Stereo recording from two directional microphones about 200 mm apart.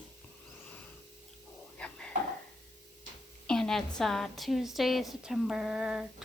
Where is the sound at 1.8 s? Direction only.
5° left (ahead or behind).